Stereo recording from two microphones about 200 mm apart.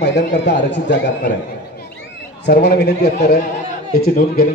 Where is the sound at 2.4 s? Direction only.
55° left (ahead or behind).